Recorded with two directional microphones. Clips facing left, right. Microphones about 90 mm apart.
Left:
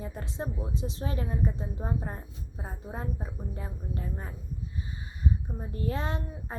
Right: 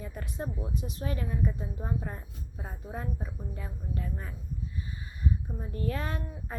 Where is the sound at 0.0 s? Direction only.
30° left (ahead or behind).